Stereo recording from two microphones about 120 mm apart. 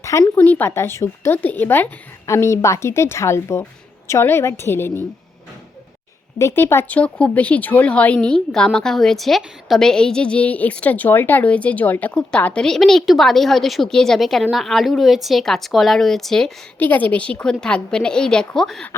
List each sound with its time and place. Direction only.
0.0 s speech: 25° left (ahead or behind)
0.3 s a woman's voice: 15° left (ahead or behind)
6.4 s a woman's voice: 20° left (ahead or behind); by 18.9 s 5° left (ahead or behind)